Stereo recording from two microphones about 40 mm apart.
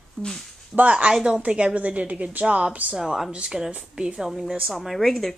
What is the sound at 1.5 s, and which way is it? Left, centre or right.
Speech, right.